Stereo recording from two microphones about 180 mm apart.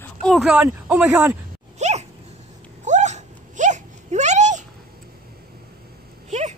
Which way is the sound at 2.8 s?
40° right (ahead or behind).